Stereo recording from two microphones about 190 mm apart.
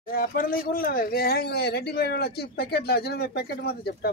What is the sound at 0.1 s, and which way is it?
Speech, 50° left (ahead or behind).